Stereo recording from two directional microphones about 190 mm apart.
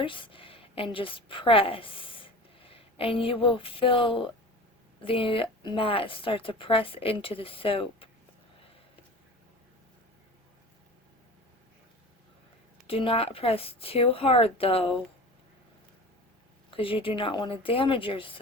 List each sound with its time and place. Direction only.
0.0 s a woman's voice: 25° left (ahead or behind)
12.9 s speech: 30° left (ahead or behind)
16.7 s a woman's voice: 30° left (ahead or behind)